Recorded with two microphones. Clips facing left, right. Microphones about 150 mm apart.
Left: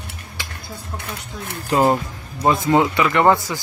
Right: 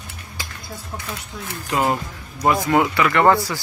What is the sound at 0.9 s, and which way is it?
Speech, 60° left (ahead or behind).